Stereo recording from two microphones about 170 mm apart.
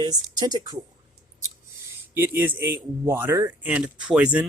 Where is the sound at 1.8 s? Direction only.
10° right (ahead or behind).